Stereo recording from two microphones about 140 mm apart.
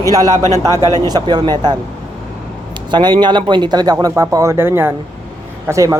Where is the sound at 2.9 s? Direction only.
35° right (ahead or behind).